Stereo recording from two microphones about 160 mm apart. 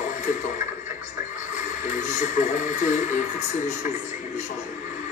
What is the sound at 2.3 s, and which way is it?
Speech, 50° left (ahead or behind).